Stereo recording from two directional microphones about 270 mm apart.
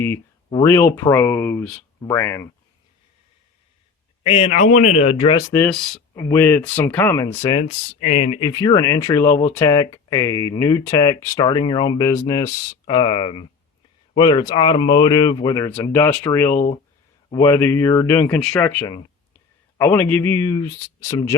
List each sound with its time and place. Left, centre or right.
0.0 s speech: centre
4.2 s speech: left
5.5 s speech: centre
7.6 s speech: left